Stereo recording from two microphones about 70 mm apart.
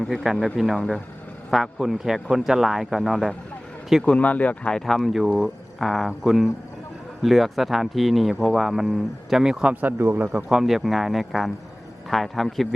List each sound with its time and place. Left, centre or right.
0.0 s speech: centre
4.0 s speech: centre
4.9 s speech: centre
9.8 s speech: right
10.3 s speech: centre